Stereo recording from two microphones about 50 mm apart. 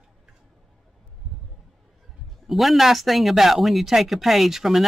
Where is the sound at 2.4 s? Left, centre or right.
Centre.